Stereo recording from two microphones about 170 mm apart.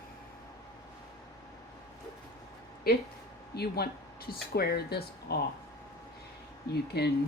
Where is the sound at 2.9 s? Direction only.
65° left (ahead or behind).